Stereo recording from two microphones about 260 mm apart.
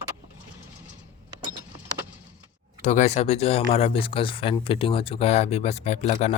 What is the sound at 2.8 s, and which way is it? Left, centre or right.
Speech, left.